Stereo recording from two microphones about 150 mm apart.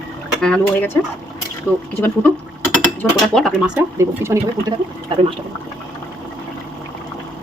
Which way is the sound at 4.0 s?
20° right (ahead or behind).